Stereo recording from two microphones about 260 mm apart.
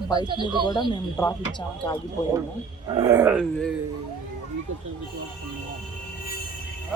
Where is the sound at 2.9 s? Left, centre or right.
Centre.